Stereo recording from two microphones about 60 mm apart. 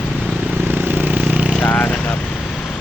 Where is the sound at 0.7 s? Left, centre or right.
Right.